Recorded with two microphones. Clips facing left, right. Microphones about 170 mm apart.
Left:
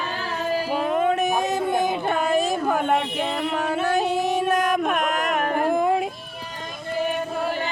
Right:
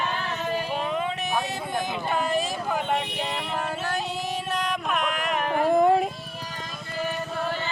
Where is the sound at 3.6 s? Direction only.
55° left (ahead or behind).